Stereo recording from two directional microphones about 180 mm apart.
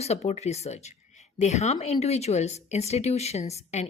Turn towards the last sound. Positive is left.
turn(degrees=40)  # may be behind; listen again after turning